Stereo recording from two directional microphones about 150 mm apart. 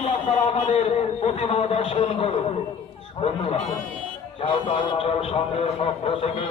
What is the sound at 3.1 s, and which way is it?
A man's voice, 40° left (ahead or behind).